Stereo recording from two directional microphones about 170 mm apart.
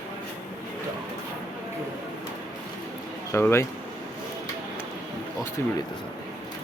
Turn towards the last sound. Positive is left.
turn(degrees=15)  # may be behind; listen again after turning